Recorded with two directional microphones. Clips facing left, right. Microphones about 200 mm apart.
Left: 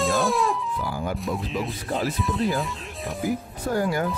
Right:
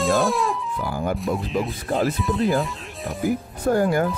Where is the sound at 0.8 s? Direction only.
55° right (ahead or behind).